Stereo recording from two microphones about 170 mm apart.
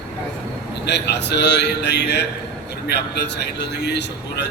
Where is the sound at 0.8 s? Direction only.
85° left.